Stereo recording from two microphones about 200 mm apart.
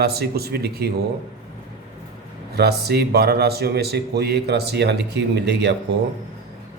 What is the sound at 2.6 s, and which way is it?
A man's voice, 55° right (ahead or behind).